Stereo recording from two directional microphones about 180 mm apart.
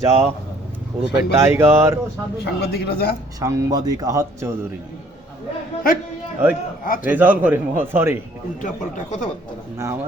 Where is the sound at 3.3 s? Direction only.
20° right (ahead or behind).